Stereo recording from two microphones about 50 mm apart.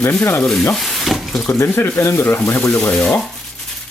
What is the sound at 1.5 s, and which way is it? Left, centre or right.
Speech, left.